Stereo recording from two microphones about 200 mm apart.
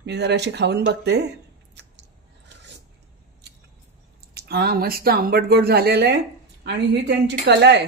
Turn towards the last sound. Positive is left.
turn(degrees=-60)  # may be behind; listen again after turning